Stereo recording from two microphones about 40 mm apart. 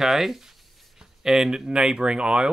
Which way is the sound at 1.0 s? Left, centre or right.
Centre.